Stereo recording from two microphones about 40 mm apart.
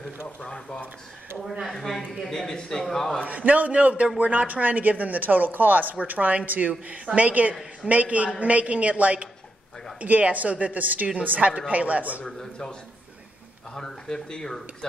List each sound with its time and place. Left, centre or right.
0.4 s speech: left
1.7 s speech: centre
2.3 s speech: centre
3.3 s a woman's voice: right
13.7 s speech: centre